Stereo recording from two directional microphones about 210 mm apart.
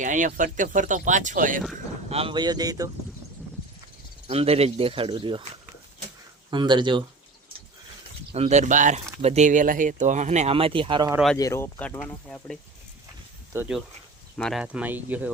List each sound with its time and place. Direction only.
0.0 s speech: 40° right (ahead or behind)
2.0 s speech: 25° right (ahead or behind)
4.3 s speech: 30° right (ahead or behind)
8.3 s speech: 30° right (ahead or behind)
11.3 s speech: 15° left (ahead or behind)
13.5 s speech: 10° right (ahead or behind)
14.3 s speech: centre (ahead or behind)